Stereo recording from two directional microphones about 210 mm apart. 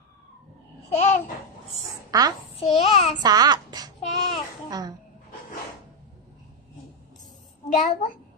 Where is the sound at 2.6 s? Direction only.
30° left (ahead or behind).